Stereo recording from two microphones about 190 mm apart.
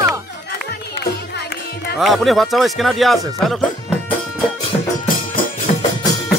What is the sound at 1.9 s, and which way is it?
Speech, centre (ahead or behind).